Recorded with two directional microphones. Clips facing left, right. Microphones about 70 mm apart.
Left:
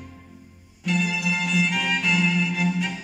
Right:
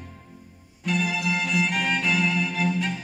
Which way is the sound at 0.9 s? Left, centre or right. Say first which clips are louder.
Left 1 dB; centre.